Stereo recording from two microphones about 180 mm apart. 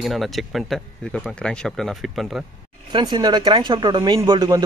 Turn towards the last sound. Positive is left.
turn(degrees=-20)  # may be behind; listen again after turning